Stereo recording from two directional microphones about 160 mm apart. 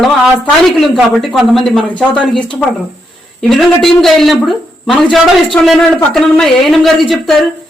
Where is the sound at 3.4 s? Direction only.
Centre (ahead or behind).